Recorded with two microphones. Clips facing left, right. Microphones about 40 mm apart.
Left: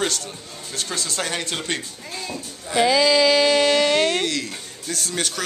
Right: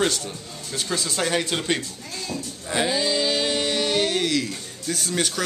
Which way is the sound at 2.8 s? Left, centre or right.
Left.